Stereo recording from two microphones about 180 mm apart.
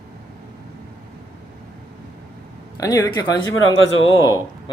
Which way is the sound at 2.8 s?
20° left (ahead or behind).